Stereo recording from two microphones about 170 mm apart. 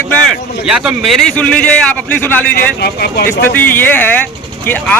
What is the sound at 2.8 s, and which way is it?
Speech, 70° left (ahead or behind).